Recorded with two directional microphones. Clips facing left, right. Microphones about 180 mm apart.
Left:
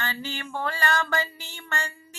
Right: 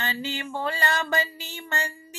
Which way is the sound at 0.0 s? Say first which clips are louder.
Right 2 dB; 20° right (ahead or behind).